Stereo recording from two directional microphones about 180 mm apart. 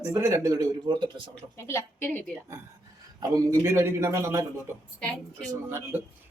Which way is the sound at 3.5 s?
15° right (ahead or behind).